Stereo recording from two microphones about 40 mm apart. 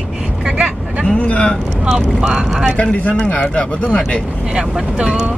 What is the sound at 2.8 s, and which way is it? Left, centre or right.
Speech, left.